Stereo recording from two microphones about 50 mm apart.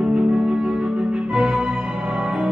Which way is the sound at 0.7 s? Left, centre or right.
Centre.